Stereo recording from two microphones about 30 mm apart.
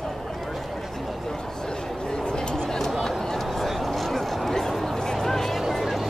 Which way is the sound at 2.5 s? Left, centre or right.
Centre.